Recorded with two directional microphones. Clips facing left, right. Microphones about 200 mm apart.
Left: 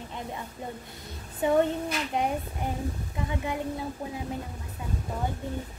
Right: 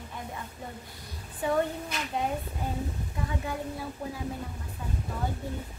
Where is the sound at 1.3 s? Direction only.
20° left (ahead or behind).